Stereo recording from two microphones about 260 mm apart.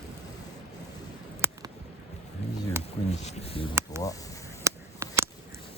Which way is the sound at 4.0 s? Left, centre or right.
Centre.